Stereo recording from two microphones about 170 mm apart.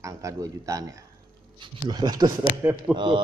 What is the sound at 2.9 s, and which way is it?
Speech, 30° right (ahead or behind).